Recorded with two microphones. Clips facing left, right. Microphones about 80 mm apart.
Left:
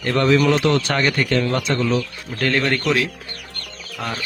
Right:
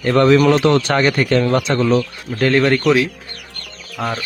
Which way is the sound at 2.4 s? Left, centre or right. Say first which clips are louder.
Right 6 dB; centre.